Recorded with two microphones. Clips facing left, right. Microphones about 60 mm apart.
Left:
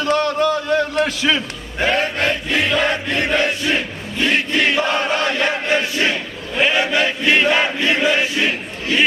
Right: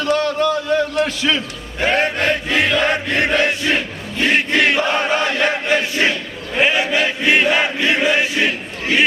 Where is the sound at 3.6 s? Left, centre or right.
Centre.